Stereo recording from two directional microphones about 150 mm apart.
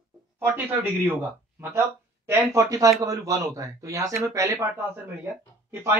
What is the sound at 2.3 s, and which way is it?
Speech, 20° right (ahead or behind).